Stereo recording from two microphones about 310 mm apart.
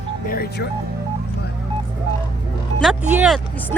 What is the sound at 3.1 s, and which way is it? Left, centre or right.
Speech, centre.